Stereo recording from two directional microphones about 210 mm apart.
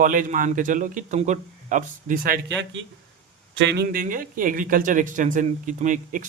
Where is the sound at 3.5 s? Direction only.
60° right (ahead or behind).